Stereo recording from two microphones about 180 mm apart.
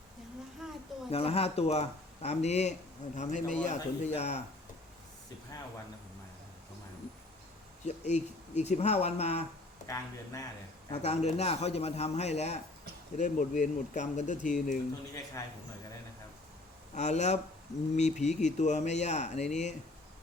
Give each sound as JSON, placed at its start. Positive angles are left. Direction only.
{"t": 0.6, "sound": "a sound", "side_deg": -5}
{"t": 1.1, "sound": "speech", "side_deg": 35}
{"t": 7.9, "sound": "speech", "side_deg": 40}
{"t": 9.8, "sound": "speech", "side_deg": 15}
{"t": 11.0, "sound": "speech", "side_deg": 40}
{"t": 16.9, "sound": "speech", "side_deg": 40}